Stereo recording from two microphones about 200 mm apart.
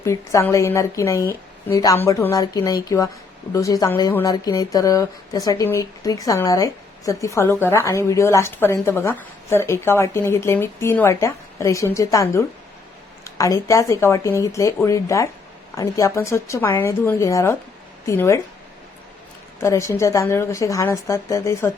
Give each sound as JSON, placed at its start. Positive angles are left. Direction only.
{"t": 0.0, "sound": "speech", "side_deg": 15}
{"t": 19.5, "sound": "speech", "side_deg": 15}